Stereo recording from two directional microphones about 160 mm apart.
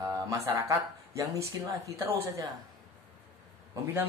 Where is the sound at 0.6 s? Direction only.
20° right (ahead or behind).